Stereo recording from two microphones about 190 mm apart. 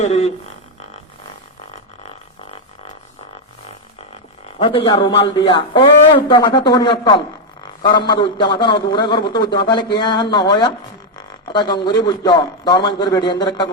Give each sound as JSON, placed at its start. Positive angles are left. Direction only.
{"t": 0.0, "sound": "speech", "side_deg": 35}
{"t": 4.6, "sound": "a man's voice", "side_deg": 30}